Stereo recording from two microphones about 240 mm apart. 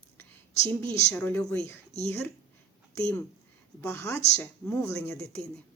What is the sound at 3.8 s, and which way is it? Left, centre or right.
Speech, centre.